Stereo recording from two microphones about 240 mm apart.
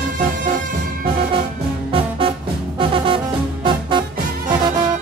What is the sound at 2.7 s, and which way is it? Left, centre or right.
Music, right.